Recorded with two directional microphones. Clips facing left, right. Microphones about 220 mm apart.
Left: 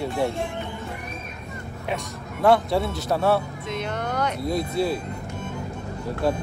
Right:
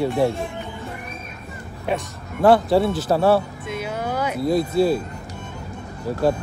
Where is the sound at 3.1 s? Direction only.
30° right (ahead or behind).